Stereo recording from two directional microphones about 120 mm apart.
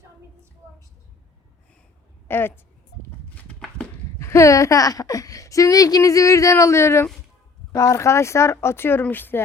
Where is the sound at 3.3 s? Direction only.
10° left (ahead or behind).